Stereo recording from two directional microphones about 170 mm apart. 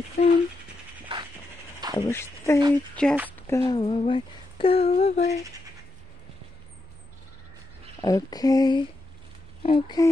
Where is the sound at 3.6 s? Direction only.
30° left (ahead or behind).